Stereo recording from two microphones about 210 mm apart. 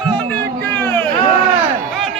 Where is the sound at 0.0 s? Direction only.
5° left (ahead or behind).